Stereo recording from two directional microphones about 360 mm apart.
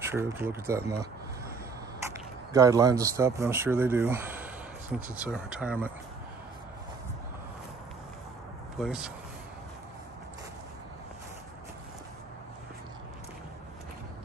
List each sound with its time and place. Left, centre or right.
0.1 s speech: centre
2.5 s speech: centre
8.7 s speech: centre